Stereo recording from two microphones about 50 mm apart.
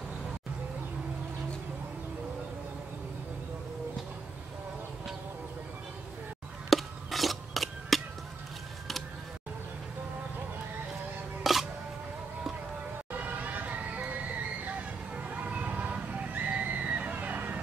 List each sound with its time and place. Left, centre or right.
6.7 s a sound: centre
11.4 s music: centre
13.1 s vehicle: right